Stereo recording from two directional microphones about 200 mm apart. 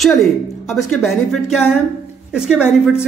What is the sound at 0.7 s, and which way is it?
A woman's voice, centre (ahead or behind).